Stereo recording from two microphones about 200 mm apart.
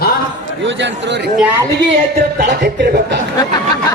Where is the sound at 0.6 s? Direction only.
65° right (ahead or behind).